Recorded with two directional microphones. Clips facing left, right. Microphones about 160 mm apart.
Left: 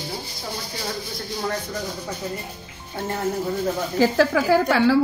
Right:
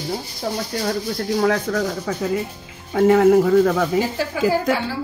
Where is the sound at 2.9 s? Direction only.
90° right.